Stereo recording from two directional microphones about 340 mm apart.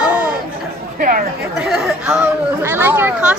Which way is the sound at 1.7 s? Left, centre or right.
Centre.